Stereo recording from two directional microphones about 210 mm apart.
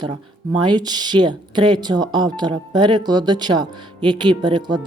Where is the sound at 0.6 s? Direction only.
20° right (ahead or behind).